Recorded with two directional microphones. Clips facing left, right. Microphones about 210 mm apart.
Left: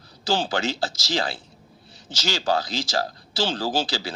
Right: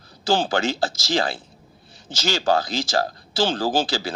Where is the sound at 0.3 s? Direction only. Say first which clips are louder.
Right 3 dB; 50° right (ahead or behind).